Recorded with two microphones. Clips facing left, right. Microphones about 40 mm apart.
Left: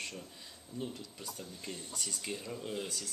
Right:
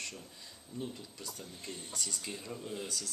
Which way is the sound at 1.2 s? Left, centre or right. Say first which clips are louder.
Left 1 dB; centre.